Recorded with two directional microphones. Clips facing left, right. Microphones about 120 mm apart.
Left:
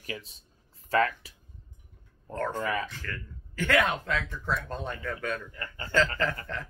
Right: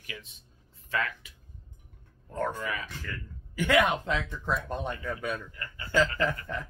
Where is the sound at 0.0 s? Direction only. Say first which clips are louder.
Left 6 dB; 35° left (ahead or behind).